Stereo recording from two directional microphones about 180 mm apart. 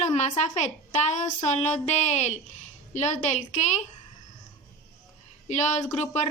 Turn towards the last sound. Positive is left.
turn(degrees=40)  # may be behind; listen again after turning